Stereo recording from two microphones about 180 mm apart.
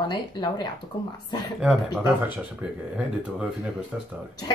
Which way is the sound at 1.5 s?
Centre (ahead or behind).